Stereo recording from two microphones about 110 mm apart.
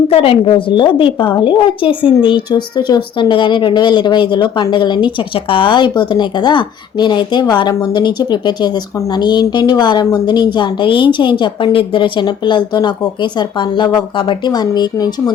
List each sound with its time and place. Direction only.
0.1 s a woman's voice: 55° left (ahead or behind); by 15.1 s 35° left (ahead or behind)